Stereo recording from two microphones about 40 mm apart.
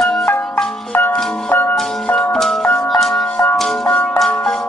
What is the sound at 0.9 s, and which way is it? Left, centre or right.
Music, left.